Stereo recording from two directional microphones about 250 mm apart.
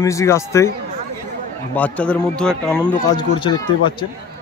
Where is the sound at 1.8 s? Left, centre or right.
Centre.